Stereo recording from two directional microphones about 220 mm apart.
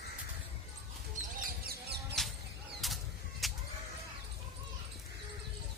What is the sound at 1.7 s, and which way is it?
Music, 50° right (ahead or behind).